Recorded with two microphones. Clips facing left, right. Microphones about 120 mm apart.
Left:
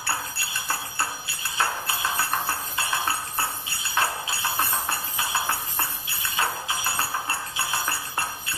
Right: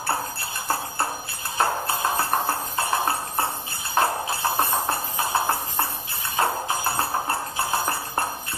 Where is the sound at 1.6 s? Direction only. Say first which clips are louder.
Right 4 dB; 40° right (ahead or behind).